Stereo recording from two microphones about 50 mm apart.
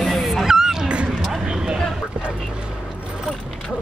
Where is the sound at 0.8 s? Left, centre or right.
Right.